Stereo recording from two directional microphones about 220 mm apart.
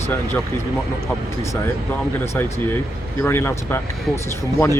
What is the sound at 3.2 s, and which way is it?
Speech, 10° left (ahead or behind).